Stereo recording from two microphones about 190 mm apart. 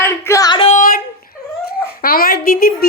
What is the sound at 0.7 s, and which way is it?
Speech, 45° left (ahead or behind).